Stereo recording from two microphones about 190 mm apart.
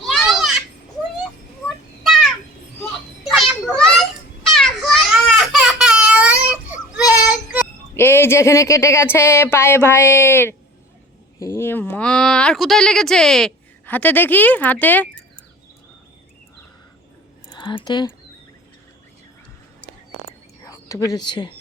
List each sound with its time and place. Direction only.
0.0 s children playing: centre (ahead or behind)
2.0 s a sound: centre (ahead or behind)
3.2 s children playing: centre (ahead or behind)
5.5 s a sound: 5° right (ahead or behind)
7.1 s child singing: 5° right (ahead or behind)
7.9 s speech: 10° left (ahead or behind)
17.5 s speech: 25° left (ahead or behind)
20.7 s speech: 15° left (ahead or behind)